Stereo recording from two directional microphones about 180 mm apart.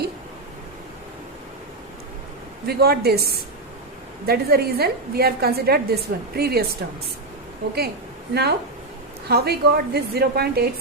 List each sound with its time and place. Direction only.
2.6 s a woman's voice: 60° right (ahead or behind)
8.3 s a woman's voice: 65° right (ahead or behind)